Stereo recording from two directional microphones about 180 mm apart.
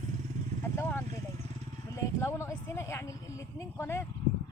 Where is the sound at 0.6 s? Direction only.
10° left (ahead or behind).